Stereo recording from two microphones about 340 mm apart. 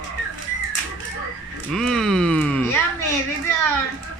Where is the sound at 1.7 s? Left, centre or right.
Centre.